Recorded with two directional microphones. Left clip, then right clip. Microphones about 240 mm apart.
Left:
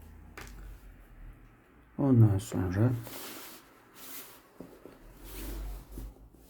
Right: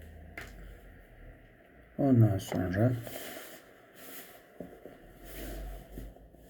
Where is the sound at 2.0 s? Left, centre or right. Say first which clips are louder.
Even; centre.